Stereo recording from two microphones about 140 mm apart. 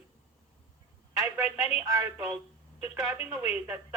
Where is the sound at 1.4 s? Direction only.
10° right (ahead or behind).